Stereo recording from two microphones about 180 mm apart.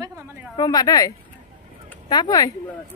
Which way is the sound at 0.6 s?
20° left (ahead or behind).